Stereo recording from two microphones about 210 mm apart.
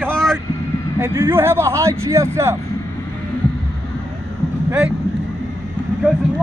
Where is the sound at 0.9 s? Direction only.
15° right (ahead or behind).